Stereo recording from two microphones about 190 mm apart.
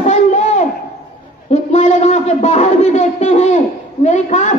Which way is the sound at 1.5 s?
35° left (ahead or behind).